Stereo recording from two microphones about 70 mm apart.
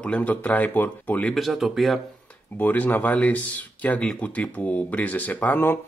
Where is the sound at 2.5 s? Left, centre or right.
Left.